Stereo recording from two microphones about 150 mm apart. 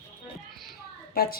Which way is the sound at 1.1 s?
90° left.